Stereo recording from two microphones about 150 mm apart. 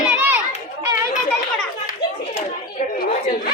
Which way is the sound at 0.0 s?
10° right (ahead or behind).